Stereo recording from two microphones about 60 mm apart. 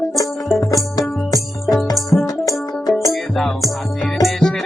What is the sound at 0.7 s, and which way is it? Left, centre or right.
Music, left.